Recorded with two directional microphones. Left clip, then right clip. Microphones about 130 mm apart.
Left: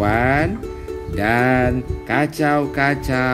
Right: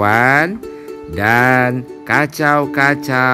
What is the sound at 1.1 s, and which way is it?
Speech, 60° right (ahead or behind).